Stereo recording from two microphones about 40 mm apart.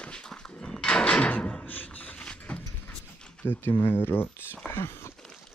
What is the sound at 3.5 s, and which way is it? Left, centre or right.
Speech, left.